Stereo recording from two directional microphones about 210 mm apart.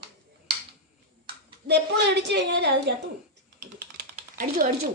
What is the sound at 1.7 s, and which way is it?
A woman's voice, 55° right (ahead or behind).